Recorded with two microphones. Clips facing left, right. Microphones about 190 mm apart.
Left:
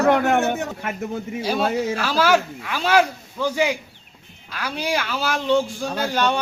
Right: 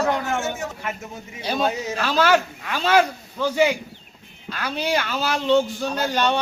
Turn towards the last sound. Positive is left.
turn(degrees=10)  # may be behind; listen again after turning